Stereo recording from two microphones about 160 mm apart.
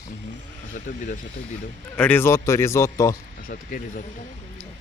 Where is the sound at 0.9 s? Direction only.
60° left (ahead or behind).